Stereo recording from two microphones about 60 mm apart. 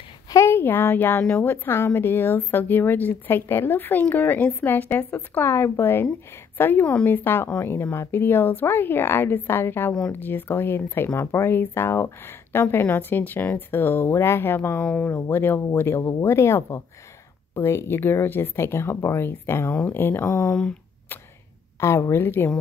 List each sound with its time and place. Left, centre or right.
0.5 s speech: left
16.0 s speech: left
16.3 s speech: left
21.7 s speech: left
22.2 s speech: left